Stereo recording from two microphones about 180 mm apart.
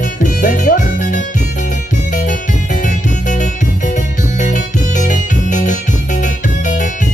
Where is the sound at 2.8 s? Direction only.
45° left (ahead or behind).